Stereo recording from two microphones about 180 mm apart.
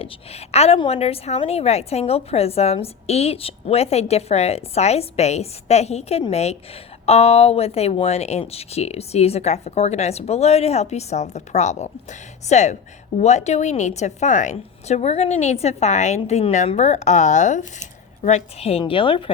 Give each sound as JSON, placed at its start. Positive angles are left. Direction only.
{"t": 0.0, "sound": "a woman's voice", "side_deg": 35}